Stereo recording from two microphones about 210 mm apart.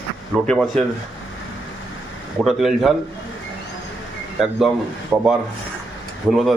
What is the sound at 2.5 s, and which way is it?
Speech, centre (ahead or behind).